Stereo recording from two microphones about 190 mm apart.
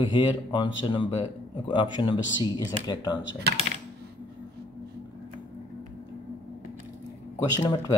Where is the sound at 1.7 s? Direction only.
25° left (ahead or behind).